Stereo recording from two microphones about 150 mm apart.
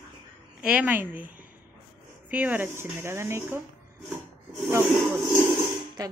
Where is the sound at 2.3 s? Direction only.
10° right (ahead or behind).